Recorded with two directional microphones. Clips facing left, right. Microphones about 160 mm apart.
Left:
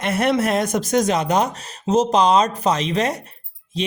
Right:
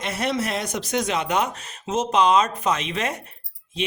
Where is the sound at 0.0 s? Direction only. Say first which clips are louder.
Left 6 dB; 55° left (ahead or behind).